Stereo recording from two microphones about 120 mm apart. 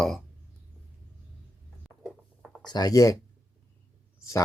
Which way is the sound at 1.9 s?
Centre (ahead or behind).